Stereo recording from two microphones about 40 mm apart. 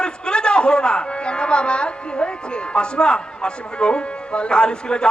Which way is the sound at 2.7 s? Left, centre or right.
Left.